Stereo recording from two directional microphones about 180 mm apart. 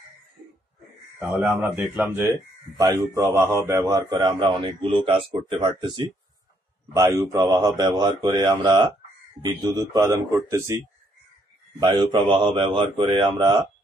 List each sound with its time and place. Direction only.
1.2 s a man's voice: 10° right (ahead or behind); by 6.0 s 25° right (ahead or behind)
7.0 s a man's voice: 15° right (ahead or behind)
11.8 s a man's voice: 25° right (ahead or behind)